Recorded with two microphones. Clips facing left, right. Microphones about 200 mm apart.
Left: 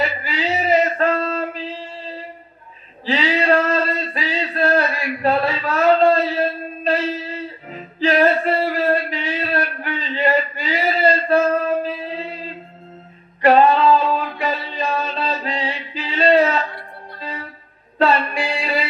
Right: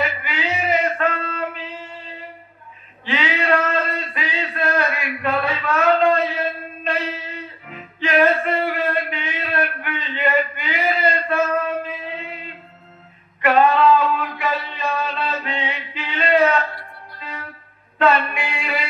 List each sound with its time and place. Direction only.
0.0 s male singing: 35° left (ahead or behind)
3.1 s a sound: 35° left (ahead or behind)
17.2 s music: 35° left (ahead or behind)